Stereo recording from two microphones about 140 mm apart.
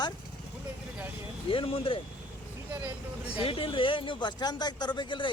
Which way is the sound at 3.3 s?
40° left (ahead or behind).